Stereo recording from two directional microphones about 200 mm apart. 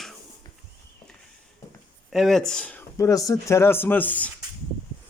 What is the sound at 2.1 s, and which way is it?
Speech, centre (ahead or behind).